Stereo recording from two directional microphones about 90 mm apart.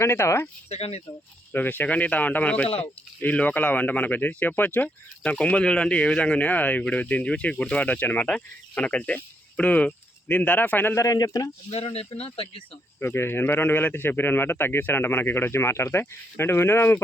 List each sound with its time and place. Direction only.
0.0 s speech: 30° left (ahead or behind)
1.5 s speech: 20° left (ahead or behind)
10.9 s speech: 40° left (ahead or behind)
11.8 s speech: 90° left
13.0 s speech: 25° left (ahead or behind)